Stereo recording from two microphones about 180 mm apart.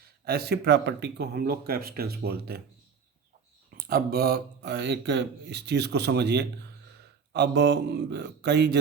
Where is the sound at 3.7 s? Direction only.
55° right (ahead or behind); by 8.8 s 70° right (ahead or behind).